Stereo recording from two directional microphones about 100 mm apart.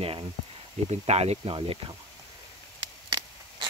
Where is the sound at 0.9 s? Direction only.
90° right.